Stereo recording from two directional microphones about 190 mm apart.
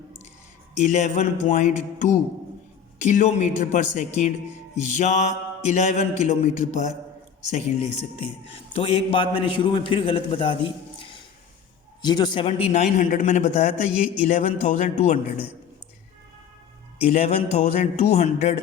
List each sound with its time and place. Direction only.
0.8 s mantra: 40° left (ahead or behind)
7.5 s a man's voice: 30° left (ahead or behind)
12.0 s mantra: 25° left (ahead or behind); by 15.2 s 40° left (ahead or behind)
17.1 s mantra: 35° left (ahead or behind)